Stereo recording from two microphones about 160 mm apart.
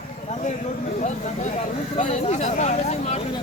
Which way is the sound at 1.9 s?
50° left (ahead or behind).